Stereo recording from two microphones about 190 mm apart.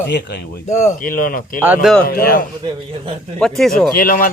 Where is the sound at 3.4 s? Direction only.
Centre (ahead or behind).